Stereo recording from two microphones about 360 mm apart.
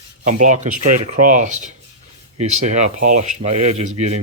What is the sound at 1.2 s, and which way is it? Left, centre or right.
Rub, right.